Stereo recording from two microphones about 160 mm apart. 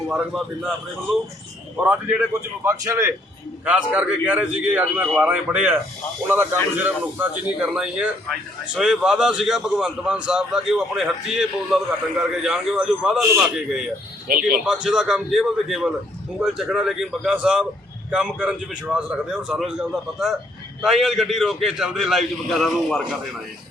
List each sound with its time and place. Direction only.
0.1 s a man's voice: 5° right (ahead or behind)
1.7 s a man's voice: 5° right (ahead or behind)
2.6 s a man's voice: 20° right (ahead or behind)
14.3 s speech: 65° right (ahead or behind)
14.6 s a man's voice: 5° right (ahead or behind)